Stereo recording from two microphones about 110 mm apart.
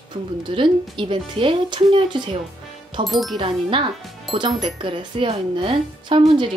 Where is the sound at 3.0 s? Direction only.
Centre (ahead or behind).